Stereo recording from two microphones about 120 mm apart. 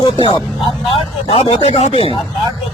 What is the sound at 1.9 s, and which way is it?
Speech, 50° left (ahead or behind).